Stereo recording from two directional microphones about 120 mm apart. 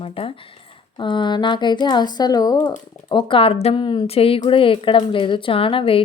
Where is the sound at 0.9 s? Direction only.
40° left (ahead or behind).